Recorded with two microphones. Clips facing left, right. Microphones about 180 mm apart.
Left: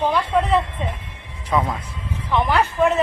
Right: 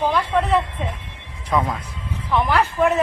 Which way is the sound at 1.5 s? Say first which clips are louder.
Even; centre (ahead or behind).